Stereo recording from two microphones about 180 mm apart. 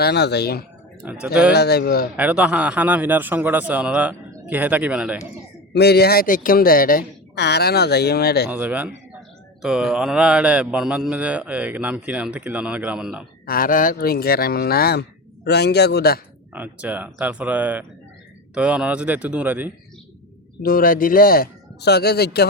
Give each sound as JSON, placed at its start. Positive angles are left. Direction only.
{"t": 0.0, "sound": "a woman's voice", "side_deg": 65}
{"t": 1.0, "sound": "speech", "side_deg": -10}
{"t": 1.5, "sound": "a woman's voice", "side_deg": 65}
{"t": 2.1, "sound": "speech", "side_deg": -10}
{"t": 5.7, "sound": "a woman's voice", "side_deg": 65}
{"t": 8.4, "sound": "speech", "side_deg": -10}
{"t": 13.4, "sound": "a woman's voice", "side_deg": 55}
{"t": 16.5, "sound": "speech", "side_deg": -10}
{"t": 20.6, "sound": "a woman's voice", "side_deg": 55}